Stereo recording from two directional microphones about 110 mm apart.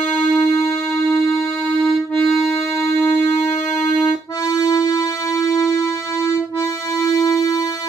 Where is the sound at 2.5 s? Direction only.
25° left (ahead or behind).